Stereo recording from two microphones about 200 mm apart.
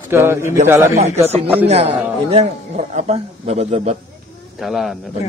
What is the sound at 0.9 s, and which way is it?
A man's voice, 30° right (ahead or behind).